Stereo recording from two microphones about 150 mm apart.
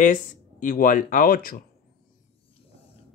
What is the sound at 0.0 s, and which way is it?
Speech, 60° left (ahead or behind).